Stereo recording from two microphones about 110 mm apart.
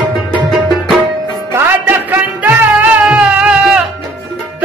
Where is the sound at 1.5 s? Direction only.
20° right (ahead or behind).